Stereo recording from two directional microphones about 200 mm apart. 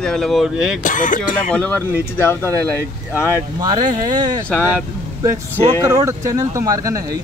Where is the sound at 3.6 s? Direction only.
20° right (ahead or behind).